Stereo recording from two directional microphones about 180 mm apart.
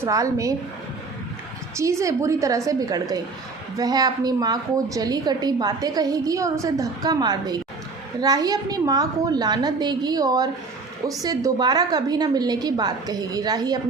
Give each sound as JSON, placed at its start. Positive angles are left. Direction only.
{"t": 0.0, "sound": "a woman's voice", "side_deg": -20}
{"t": 1.7, "sound": "a woman's voice", "side_deg": -15}